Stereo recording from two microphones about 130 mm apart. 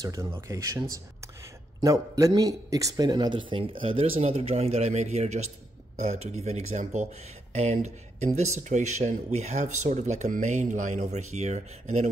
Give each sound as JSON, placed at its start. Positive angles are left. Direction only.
{"t": 0.0, "sound": "a man's voice", "side_deg": -25}